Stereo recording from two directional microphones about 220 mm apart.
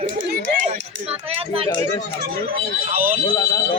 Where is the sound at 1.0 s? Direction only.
25° right (ahead or behind).